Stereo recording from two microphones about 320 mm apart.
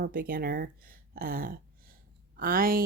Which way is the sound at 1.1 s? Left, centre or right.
Right.